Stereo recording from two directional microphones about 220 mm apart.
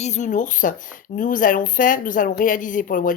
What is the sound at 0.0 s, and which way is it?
Speech, 35° left (ahead or behind).